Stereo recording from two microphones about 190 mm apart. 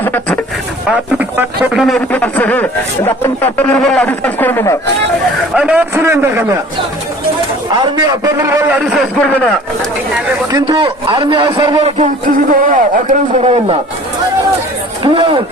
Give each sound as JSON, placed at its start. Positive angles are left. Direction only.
{"t": 0.0, "sound": "a sound", "side_deg": 10}
{"t": 0.9, "sound": "a man's voice", "side_deg": -5}
{"t": 5.5, "sound": "a man's voice", "side_deg": -5}
{"t": 7.9, "sound": "a man's voice", "side_deg": -20}
{"t": 9.1, "sound": "speech", "side_deg": 5}
{"t": 10.5, "sound": "a man's voice", "side_deg": -25}
{"t": 11.9, "sound": "a man's voice", "side_deg": -40}
{"t": 15.0, "sound": "a man's voice", "side_deg": -25}